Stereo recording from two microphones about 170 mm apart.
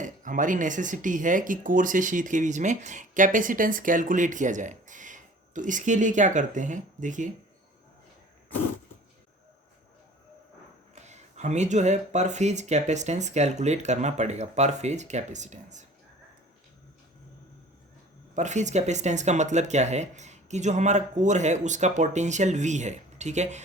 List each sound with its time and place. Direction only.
0.0 s speech: 50° right (ahead or behind)
10.9 s speech: 40° right (ahead or behind)
18.3 s speech: 45° right (ahead or behind)